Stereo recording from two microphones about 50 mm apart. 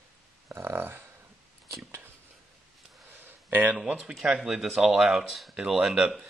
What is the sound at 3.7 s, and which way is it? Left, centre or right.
Speech, centre.